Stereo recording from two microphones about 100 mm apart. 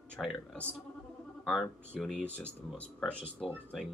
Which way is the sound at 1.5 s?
5° left (ahead or behind).